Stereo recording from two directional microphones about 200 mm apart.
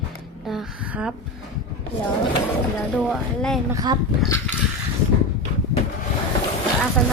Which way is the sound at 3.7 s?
20° right (ahead or behind).